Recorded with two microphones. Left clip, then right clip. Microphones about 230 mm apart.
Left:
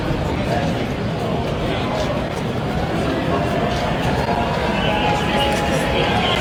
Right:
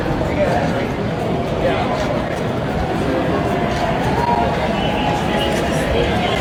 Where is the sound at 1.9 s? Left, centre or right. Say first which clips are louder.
Right 2 dB; centre.